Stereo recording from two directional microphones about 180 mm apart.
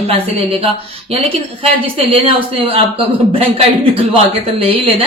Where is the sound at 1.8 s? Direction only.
30° right (ahead or behind).